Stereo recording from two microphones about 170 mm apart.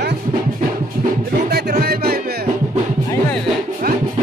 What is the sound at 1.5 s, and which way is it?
Music, 65° right (ahead or behind).